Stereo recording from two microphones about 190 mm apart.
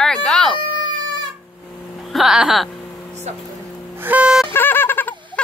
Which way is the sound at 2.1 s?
Centre (ahead or behind).